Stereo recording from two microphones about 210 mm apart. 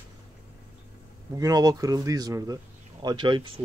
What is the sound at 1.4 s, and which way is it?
Speech, 15° right (ahead or behind).